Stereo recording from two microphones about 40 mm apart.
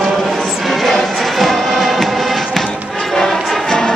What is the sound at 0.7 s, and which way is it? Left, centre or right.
Music, centre.